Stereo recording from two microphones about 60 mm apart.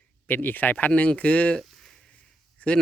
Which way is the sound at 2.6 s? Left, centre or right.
Centre.